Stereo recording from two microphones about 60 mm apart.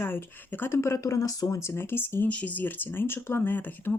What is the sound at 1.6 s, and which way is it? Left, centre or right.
Speech, left.